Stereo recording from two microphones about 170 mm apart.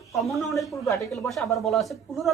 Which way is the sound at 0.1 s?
Centre (ahead or behind).